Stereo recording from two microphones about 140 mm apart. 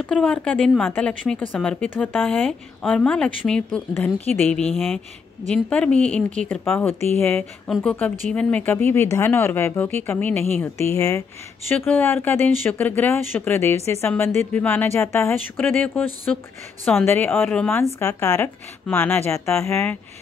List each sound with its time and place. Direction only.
0.0 s speech: 5° left (ahead or behind)